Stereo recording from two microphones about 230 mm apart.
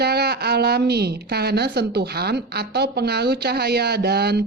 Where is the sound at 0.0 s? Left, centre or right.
Right.